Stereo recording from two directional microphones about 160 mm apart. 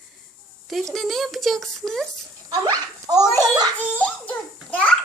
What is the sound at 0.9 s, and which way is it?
A child's voice, centre (ahead or behind).